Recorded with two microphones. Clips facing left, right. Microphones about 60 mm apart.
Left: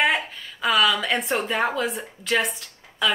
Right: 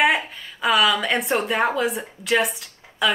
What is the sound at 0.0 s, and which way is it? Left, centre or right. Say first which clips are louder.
A woman's voice: right 3 dB; centre.